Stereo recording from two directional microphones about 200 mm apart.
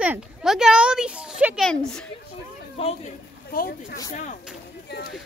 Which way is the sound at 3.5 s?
45° left (ahead or behind).